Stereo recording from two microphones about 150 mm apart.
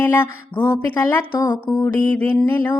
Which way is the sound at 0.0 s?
15° left (ahead or behind).